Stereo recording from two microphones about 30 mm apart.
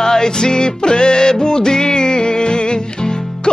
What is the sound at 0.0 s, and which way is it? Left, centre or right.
Music, centre.